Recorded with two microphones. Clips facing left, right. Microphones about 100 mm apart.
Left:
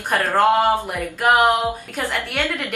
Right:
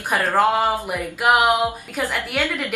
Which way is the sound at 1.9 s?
Centre (ahead or behind).